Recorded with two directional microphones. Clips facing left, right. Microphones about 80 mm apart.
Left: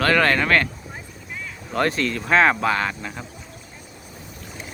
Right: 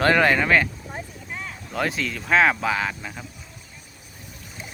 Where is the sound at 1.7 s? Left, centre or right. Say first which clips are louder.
Left 4 dB; centre.